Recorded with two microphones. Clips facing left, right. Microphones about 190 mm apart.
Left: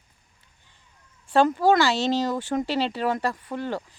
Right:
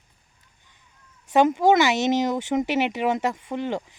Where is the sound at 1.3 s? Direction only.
20° right (ahead or behind).